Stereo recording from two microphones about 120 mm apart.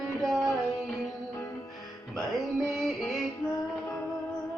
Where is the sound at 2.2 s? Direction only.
Centre (ahead or behind).